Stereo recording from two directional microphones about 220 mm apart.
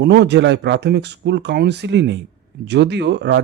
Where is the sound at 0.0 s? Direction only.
50° right (ahead or behind).